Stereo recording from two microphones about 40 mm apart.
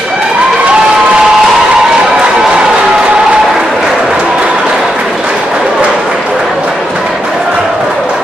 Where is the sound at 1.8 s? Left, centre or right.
Centre.